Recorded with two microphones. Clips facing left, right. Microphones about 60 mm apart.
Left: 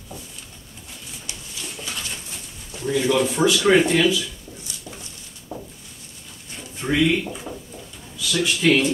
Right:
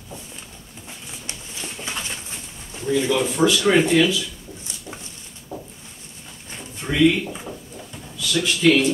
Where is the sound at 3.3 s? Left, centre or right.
Centre.